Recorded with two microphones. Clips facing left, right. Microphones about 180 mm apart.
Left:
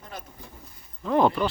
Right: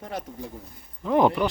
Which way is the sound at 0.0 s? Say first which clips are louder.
Right 7 dB; 80° right.